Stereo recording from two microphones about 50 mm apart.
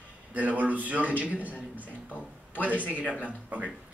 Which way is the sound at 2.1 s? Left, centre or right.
Left.